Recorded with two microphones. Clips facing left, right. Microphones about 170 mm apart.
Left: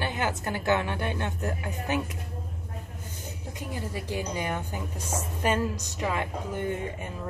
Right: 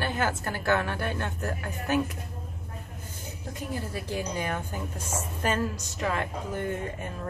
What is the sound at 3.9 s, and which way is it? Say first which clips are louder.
A woman's voice: left 2 dB; 15° left (ahead or behind).